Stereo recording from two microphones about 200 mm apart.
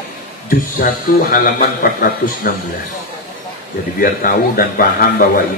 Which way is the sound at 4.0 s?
45° left (ahead or behind).